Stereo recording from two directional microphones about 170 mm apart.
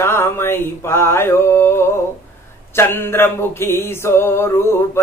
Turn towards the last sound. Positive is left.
turn(degrees=15)  # may be behind; listen again after turning